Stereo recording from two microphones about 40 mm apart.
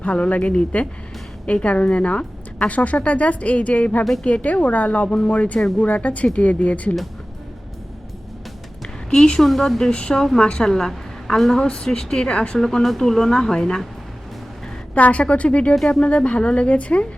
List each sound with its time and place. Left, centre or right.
0.0 s a woman's voice: left
9.0 s a woman's voice: centre
9.9 s a woman's voice: left; by 11.6 s centre
11.6 s a woman's voice: centre
12.5 s speech: centre
14.9 s a woman's voice: left